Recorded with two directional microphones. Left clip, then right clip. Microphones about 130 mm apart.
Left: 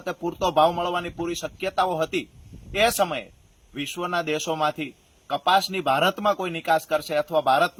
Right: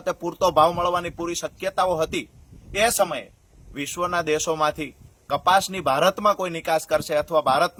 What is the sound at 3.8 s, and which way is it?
A man's voice, 35° right (ahead or behind).